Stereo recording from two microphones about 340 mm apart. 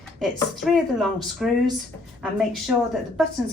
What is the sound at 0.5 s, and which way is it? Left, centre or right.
A woman's voice, centre.